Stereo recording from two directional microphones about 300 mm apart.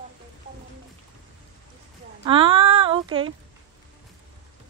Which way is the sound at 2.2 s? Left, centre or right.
Centre.